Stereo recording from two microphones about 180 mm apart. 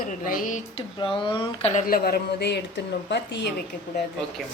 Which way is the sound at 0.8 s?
25° left (ahead or behind).